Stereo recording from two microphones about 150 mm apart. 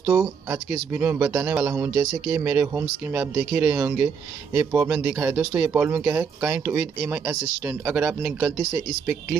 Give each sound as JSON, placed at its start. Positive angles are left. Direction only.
{"t": 0.0, "sound": "speech", "side_deg": -15}